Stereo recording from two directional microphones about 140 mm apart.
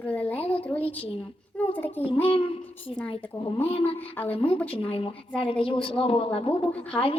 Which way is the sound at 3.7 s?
40° left (ahead or behind).